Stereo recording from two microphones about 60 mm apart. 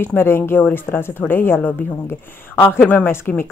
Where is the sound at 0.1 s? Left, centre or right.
Centre.